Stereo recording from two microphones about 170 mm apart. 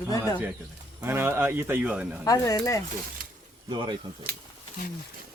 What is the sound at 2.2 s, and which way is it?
Speech, 20° left (ahead or behind).